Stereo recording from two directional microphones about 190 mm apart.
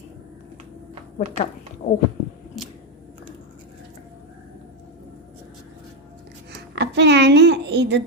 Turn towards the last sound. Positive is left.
turn(degrees=-65)  # may be behind; listen again after turning